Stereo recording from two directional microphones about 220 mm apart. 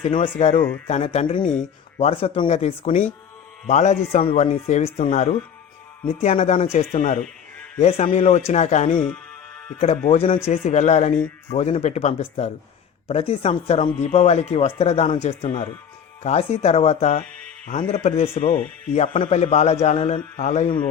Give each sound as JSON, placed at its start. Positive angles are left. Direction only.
{"t": 0.0, "sound": "a man's voice", "side_deg": 30}